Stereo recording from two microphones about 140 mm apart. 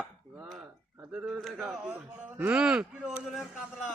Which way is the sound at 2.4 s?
10° right (ahead or behind).